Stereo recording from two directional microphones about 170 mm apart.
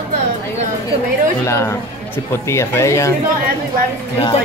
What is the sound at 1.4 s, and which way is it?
Speech, 15° left (ahead or behind).